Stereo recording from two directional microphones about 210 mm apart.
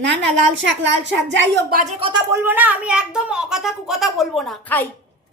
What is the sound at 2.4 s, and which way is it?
Speech, 10° right (ahead or behind).